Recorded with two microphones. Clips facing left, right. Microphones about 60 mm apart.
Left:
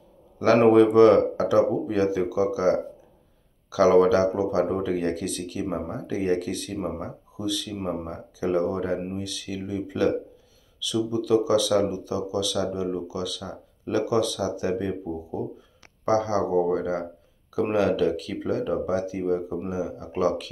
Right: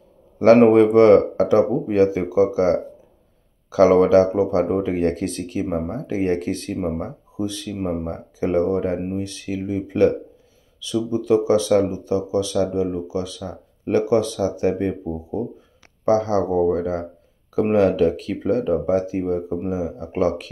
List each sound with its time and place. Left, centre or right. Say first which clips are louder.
0.6 s speech: left 1 dB; right